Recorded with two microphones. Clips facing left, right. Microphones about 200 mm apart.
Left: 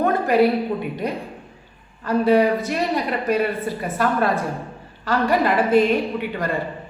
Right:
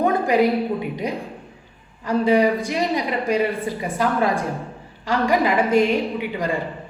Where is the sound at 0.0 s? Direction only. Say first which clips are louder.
Even; 15° right (ahead or behind).